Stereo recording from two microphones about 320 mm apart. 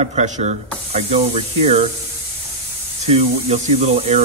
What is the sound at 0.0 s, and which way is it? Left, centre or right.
Speech, centre.